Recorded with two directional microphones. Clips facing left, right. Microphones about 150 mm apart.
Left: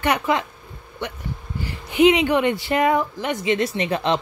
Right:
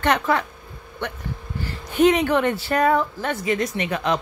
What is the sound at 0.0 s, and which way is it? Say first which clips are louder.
Speech: even; 15° left (ahead or behind).